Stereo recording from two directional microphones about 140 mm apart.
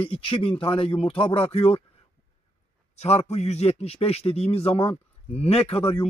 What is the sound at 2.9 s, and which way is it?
A man's voice, 50° left (ahead or behind).